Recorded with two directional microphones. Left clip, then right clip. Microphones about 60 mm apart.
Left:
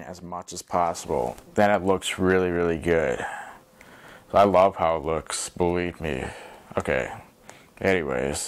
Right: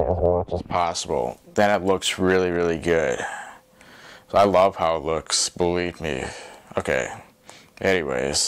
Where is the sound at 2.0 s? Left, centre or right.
Right.